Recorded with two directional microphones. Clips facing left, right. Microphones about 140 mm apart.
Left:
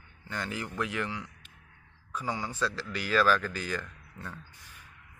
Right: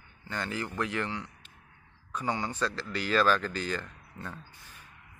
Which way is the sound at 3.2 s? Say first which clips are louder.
Even; 20° right (ahead or behind).